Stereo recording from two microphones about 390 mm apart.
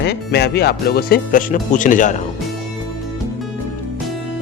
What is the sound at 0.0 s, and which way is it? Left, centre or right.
Speech, left.